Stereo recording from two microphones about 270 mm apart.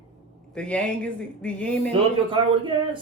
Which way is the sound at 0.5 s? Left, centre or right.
Centre.